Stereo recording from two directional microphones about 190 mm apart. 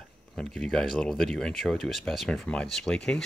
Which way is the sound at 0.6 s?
Centre (ahead or behind).